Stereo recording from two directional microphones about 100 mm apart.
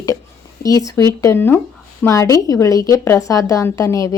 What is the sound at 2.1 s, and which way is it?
A woman's voice, 35° left (ahead or behind).